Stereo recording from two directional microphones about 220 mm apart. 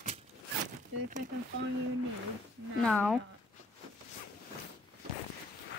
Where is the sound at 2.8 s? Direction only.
5° left (ahead or behind).